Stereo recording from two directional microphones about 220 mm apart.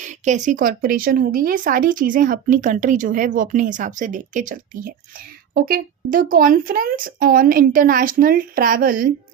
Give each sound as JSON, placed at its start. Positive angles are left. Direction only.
{"t": 0.0, "sound": "speech", "side_deg": -35}